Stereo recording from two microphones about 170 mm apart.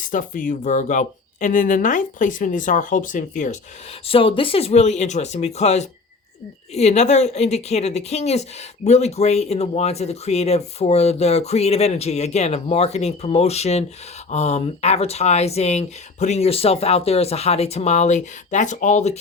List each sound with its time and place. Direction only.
0.0 s speech: 50° left (ahead or behind)
4.0 s a woman's voice: 35° left (ahead or behind)